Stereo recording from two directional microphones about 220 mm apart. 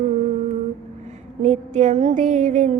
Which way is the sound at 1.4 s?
30° right (ahead or behind).